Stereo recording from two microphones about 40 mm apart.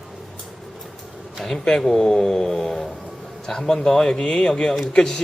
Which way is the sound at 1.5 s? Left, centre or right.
Centre.